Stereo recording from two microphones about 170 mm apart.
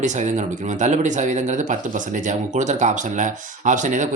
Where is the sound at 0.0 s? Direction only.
45° right (ahead or behind).